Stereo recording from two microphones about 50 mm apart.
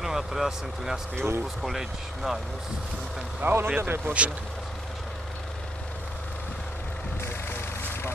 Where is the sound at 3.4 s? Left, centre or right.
Right.